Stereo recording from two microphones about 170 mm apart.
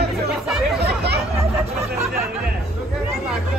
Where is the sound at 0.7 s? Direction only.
70° right (ahead or behind).